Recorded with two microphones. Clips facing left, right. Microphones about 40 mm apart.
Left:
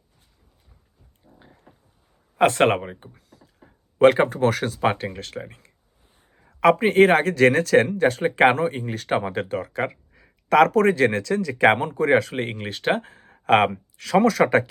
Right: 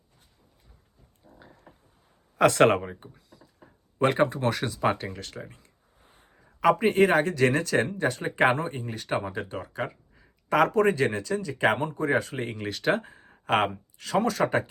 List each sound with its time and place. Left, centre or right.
2.4 s speech: left
3.2 s a sound: left
3.9 s speech: left
13.4 s speech: left